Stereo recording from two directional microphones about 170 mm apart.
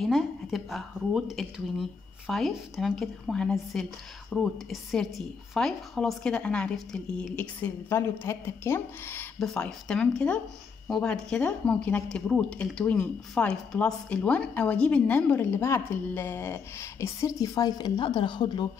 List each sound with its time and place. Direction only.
0.0 s a woman's voice: centre (ahead or behind); by 18.7 s 25° left (ahead or behind)